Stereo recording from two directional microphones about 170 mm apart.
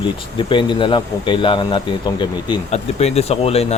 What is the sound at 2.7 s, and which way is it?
Speech, 40° left (ahead or behind).